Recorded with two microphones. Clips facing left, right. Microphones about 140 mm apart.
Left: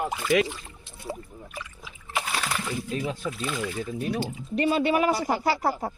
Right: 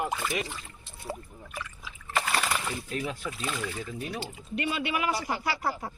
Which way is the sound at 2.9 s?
25° left (ahead or behind).